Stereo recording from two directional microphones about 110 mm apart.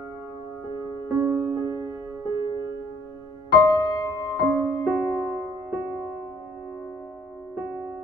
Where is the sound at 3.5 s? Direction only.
40° left (ahead or behind).